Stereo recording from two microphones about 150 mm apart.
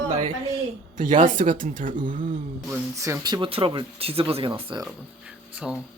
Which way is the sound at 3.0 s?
25° right (ahead or behind).